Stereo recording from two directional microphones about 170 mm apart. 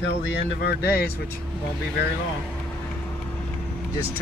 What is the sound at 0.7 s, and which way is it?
Speech, 65° left (ahead or behind).